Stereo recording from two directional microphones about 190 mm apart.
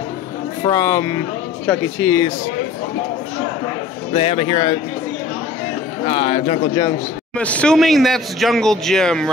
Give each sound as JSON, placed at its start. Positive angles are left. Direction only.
{"t": 0.7, "sound": "speech", "side_deg": 15}
{"t": 4.1, "sound": "a man's voice", "side_deg": 30}
{"t": 6.0, "sound": "a man's voice", "side_deg": 30}
{"t": 7.3, "sound": "speech", "side_deg": 5}